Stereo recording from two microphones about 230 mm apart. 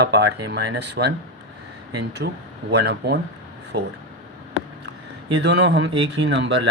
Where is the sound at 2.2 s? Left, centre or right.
Right.